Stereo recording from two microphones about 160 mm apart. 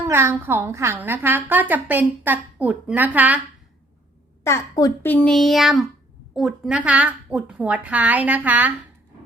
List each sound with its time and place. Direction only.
0.1 s a woman's voice: 15° right (ahead or behind)
4.4 s a woman's voice: 20° left (ahead or behind)
5.0 s a woman's voice: 10° left (ahead or behind); by 8.7 s 10° right (ahead or behind)